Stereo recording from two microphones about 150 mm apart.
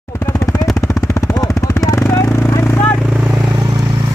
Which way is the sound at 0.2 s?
20° left (ahead or behind).